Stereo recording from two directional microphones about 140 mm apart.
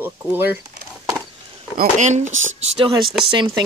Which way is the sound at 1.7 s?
55° right (ahead or behind).